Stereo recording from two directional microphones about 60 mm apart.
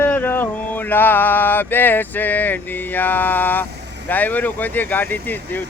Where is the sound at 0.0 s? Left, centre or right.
Left.